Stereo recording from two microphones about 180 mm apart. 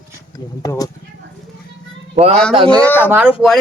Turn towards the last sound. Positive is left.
turn(degrees=-10)  # may be behind; listen again after turning